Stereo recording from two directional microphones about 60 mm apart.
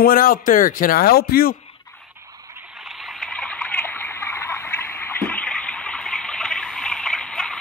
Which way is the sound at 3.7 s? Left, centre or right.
Left.